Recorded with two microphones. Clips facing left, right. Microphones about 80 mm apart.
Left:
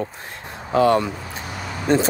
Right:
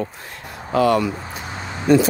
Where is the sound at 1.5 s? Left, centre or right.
Right.